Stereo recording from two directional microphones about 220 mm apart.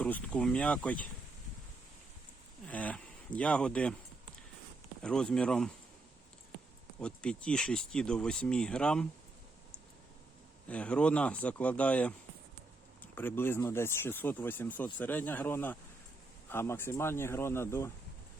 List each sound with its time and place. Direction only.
0.0 s speech: 5° left (ahead or behind)
2.6 s speech: 5° left (ahead or behind)
5.0 s speech: 5° left (ahead or behind)
7.0 s speech: 5° left (ahead or behind)
10.7 s speech: 5° left (ahead or behind)